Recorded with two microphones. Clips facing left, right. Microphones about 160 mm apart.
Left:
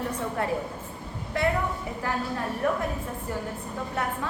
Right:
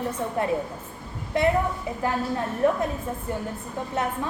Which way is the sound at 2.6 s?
25° right (ahead or behind).